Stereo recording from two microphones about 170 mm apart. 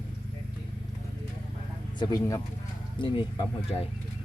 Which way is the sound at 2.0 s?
25° left (ahead or behind).